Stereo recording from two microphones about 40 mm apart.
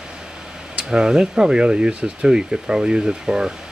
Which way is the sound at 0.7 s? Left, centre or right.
Right.